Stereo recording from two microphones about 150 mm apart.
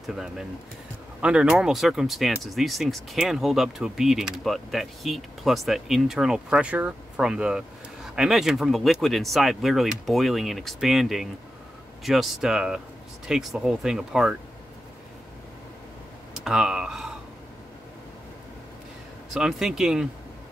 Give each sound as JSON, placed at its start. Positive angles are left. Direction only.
{"t": 0.0, "sound": "speech", "side_deg": -5}
{"t": 16.3, "sound": "speech", "side_deg": -5}
{"t": 19.3, "sound": "speech", "side_deg": -5}